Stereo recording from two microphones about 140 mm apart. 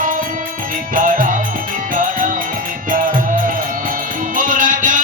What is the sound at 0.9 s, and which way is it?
Music, 75° right (ahead or behind).